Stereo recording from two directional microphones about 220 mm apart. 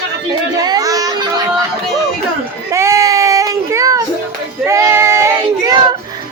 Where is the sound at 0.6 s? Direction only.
15° right (ahead or behind).